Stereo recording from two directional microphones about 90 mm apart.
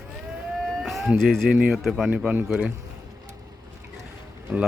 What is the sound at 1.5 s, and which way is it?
A man's voice, 5° right (ahead or behind).